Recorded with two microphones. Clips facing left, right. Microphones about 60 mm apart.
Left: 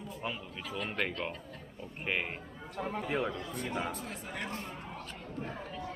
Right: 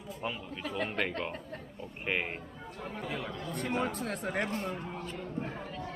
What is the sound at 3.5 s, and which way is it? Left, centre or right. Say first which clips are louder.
Speech: right 3 dB; right.